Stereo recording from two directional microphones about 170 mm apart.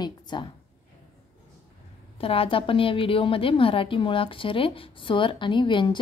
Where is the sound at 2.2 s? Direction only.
35° left (ahead or behind).